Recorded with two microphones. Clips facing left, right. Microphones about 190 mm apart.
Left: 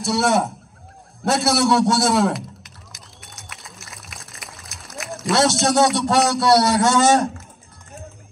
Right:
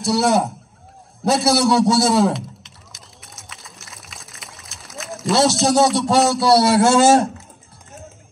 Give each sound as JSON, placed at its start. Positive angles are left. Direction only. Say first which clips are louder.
{"t": 0.0, "sound": "a man's voice", "louder": "right 2 dB", "side_deg": 0}
{"t": 1.2, "sound": "a sound", "louder": "right 2 dB", "side_deg": 0}
{"t": 6.8, "sound": "speech", "louder": "right 3 dB", "side_deg": -30}